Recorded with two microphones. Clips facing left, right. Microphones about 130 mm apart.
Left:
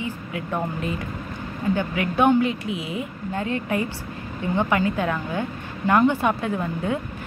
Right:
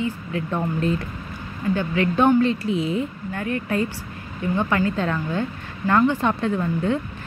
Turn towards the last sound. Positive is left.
turn(degrees=10)  # may be behind; listen again after turning